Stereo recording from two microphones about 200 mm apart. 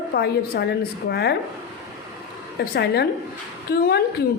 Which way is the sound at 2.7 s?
55° left (ahead or behind).